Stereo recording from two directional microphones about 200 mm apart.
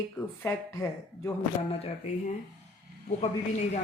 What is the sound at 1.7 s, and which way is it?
Speech, 30° left (ahead or behind).